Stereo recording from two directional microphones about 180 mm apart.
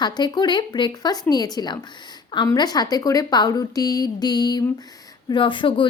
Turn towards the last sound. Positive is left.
turn(degrees=25)  # may be behind; listen again after turning